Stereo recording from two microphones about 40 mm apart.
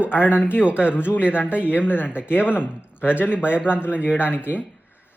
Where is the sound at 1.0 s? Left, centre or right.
Left.